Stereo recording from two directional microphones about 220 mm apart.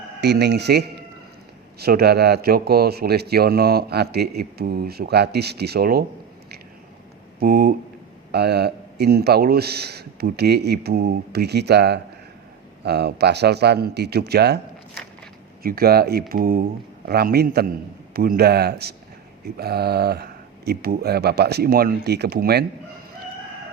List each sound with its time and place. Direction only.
0.2 s speech: 50° right (ahead or behind)
7.3 s speech: 45° right (ahead or behind)
15.6 s speech: 45° right (ahead or behind)